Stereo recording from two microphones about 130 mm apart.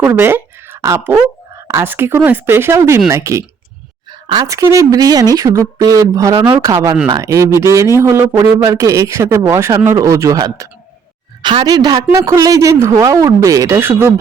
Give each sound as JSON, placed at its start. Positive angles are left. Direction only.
{"t": 0.0, "sound": "a man's voice", "side_deg": -15}
{"t": 4.1, "sound": "a sound", "side_deg": -35}
{"t": 4.4, "sound": "a man's voice", "side_deg": -25}